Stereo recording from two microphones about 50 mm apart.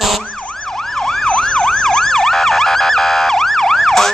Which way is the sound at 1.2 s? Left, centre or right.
Centre.